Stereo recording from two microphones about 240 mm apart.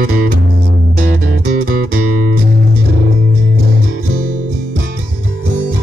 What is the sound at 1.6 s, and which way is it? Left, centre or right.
Music, right.